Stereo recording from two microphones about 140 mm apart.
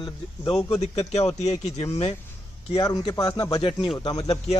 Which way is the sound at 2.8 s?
25° left (ahead or behind).